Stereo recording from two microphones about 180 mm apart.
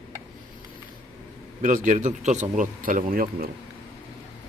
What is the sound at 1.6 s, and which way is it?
Speech, 45° right (ahead or behind).